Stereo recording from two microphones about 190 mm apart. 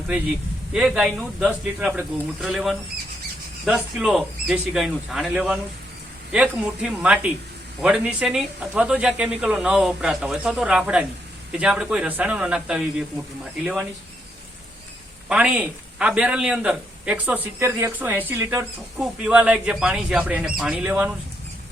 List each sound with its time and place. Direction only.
0.7 s a man's voice: 5° right (ahead or behind)
15.3 s a man's voice: 5° right (ahead or behind)